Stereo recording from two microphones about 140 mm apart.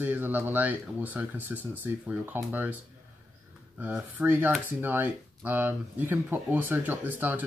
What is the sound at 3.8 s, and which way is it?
Speech, 10° right (ahead or behind).